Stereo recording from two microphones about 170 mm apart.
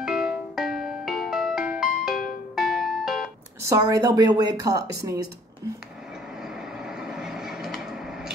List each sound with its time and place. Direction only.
0.0 s music: 5° right (ahead or behind)
3.6 s a woman's voice: 20° right (ahead or behind)
7.0 s vehicle: 5° right (ahead or behind)